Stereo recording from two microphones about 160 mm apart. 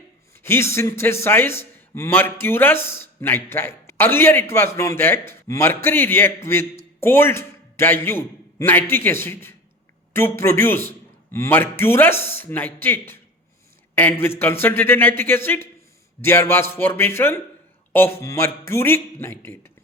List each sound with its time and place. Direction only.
0.4 s a man's voice: 15° left (ahead or behind)